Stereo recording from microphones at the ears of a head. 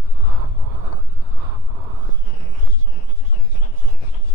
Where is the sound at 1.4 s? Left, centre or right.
Right.